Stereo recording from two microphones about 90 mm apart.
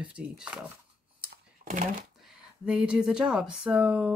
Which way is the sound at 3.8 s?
15° right (ahead or behind).